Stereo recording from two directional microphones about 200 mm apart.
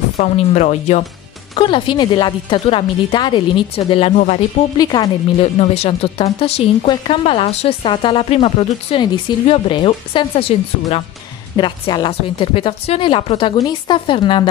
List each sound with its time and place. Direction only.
0.2 s speech: 35° left (ahead or behind)
1.5 s a woman's voice: 25° left (ahead or behind)
4.7 s a woman's voice: 20° left (ahead or behind)
11.5 s a woman's voice: 25° left (ahead or behind)